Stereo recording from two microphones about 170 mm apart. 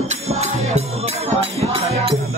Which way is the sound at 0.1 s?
40° right (ahead or behind).